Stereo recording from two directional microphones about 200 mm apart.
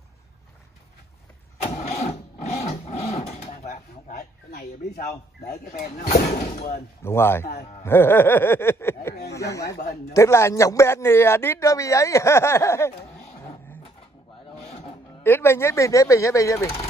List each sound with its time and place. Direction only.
1.6 s vehicle: 35° left (ahead or behind)
5.5 s speech: 40° left (ahead or behind)
6.4 s speech: 30° left (ahead or behind)
7.0 s a man's voice: 10° left (ahead or behind)
9.8 s speech: 45° left (ahead or behind)
10.1 s a man's voice: 15° left (ahead or behind)
14.5 s music: 30° left (ahead or behind)
15.2 s a man's voice: 10° left (ahead or behind)